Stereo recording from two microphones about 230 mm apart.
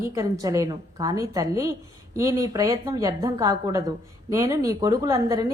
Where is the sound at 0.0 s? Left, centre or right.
Centre.